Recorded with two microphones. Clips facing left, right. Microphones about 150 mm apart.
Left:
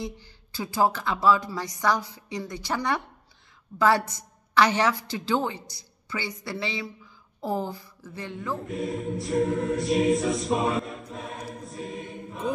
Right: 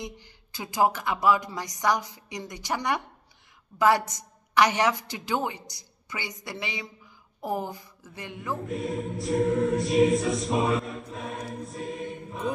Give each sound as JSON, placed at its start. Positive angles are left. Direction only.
{"t": 0.0, "sound": "a woman's voice", "side_deg": -20}
{"t": 8.6, "sound": "choir", "side_deg": 0}